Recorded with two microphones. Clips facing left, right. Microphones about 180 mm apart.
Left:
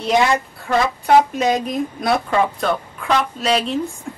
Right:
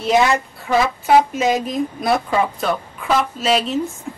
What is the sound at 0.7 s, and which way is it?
A woman's voice, 5° right (ahead or behind).